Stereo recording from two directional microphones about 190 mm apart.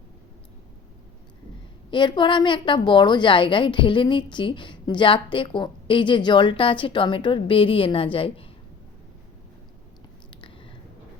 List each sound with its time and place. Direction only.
1.9 s a woman's voice: 25° left (ahead or behind)